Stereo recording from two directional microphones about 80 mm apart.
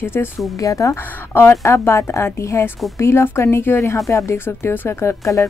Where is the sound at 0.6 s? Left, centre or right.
Left.